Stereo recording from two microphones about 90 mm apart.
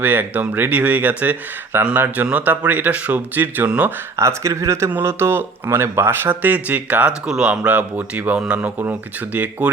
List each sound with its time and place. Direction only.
0.0 s speech: 20° right (ahead or behind)
4.2 s speech: 30° right (ahead or behind)